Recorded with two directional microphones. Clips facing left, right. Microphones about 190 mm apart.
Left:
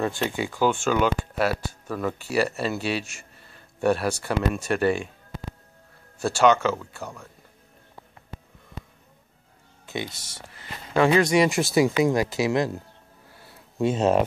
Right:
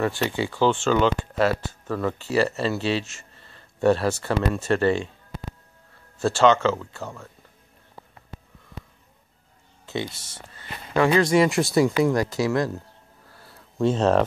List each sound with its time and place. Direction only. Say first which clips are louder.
0.4 s speech: right 2 dB; 10° left (ahead or behind)
6.1 s speech: right 1 dB; 10° left (ahead or behind)
9.8 s speech: right 2 dB; 15° left (ahead or behind)
11.4 s speech: right 1 dB; centre (ahead or behind)
12.0 s speech: even; 20° left (ahead or behind)